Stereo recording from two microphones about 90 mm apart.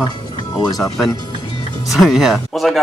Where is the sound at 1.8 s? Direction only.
Centre (ahead or behind).